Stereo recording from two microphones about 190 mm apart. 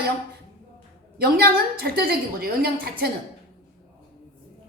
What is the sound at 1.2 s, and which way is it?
A woman's voice, 55° right (ahead or behind).